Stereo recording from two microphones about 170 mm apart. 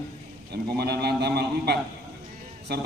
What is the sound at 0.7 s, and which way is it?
A man's voice, 70° right (ahead or behind).